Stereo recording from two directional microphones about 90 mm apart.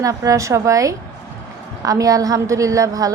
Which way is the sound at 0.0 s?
40° right (ahead or behind).